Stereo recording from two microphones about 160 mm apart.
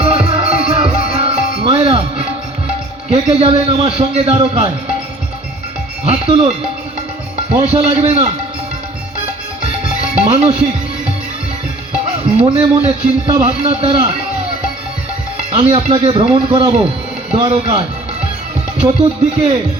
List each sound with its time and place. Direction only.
0.0 s music: 35° right (ahead or behind)
3.1 s a man's voice: 40° right (ahead or behind)
6.1 s a man's voice: 35° right (ahead or behind)
7.5 s a man's voice: 40° right (ahead or behind)
10.2 s a man's voice: 35° right (ahead or behind)
12.4 s a man's voice: 40° right (ahead or behind)
15.5 s a man's voice: 35° right (ahead or behind)